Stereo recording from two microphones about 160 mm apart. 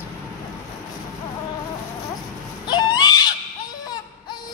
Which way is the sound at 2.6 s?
25° left (ahead or behind).